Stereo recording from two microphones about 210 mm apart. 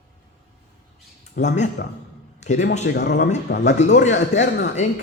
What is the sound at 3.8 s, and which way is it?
Speech, 35° left (ahead or behind).